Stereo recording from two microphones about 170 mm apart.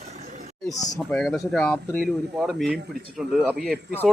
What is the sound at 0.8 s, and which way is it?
Speech, 20° left (ahead or behind).